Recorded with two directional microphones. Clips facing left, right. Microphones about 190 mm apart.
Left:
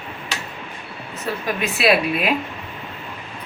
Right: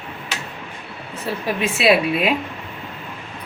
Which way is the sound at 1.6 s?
25° right (ahead or behind).